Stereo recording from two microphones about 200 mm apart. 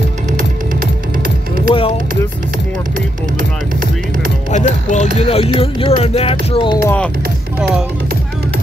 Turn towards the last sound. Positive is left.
turn(degrees=5)  # may be behind; listen again after turning